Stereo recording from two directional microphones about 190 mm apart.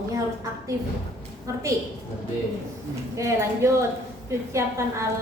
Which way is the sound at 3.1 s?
15° right (ahead or behind).